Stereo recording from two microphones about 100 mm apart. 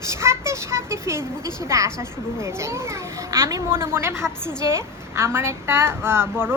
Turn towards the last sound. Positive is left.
turn(degrees=-25)  # may be behind; listen again after turning